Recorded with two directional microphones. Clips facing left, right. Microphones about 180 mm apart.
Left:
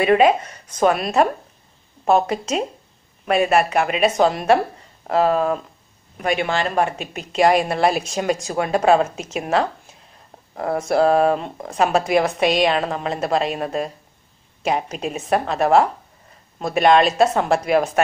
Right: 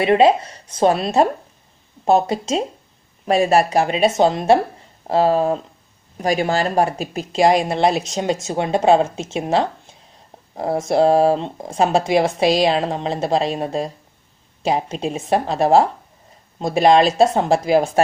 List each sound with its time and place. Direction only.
0.0 s speech: 30° right (ahead or behind)